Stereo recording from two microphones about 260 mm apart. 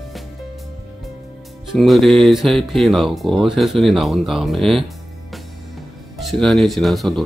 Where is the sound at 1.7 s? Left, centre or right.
Centre.